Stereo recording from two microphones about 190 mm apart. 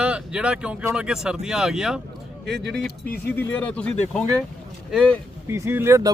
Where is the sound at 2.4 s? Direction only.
65° right (ahead or behind).